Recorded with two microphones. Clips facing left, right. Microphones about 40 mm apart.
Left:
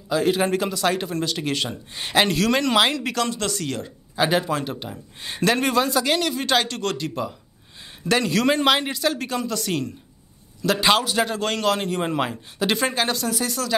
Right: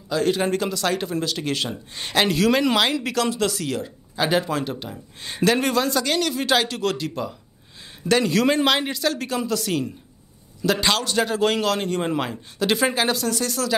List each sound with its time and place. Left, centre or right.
0.1 s a man's voice: centre
10.9 s speech: centre
11.1 s speech: centre